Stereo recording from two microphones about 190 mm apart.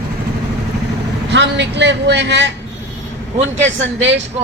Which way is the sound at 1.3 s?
65° right (ahead or behind).